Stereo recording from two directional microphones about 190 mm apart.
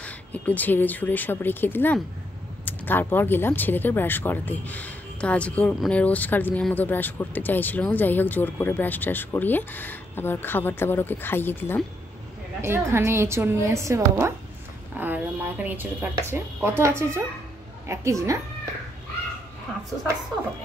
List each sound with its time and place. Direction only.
0.0 s speech: 10° left (ahead or behind)
12.6 s a woman's voice: 15° right (ahead or behind)